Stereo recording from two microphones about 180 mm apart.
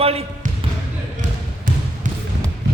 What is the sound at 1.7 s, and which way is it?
Basketball bounce, 50° right (ahead or behind).